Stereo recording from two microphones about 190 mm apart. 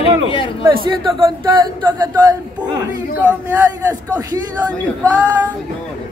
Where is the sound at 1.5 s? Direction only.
20° right (ahead or behind).